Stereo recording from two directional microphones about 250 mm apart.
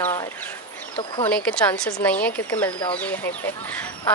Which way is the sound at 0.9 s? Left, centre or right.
Centre.